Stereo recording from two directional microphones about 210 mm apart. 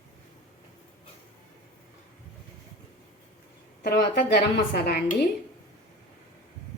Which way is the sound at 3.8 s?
50° left (ahead or behind).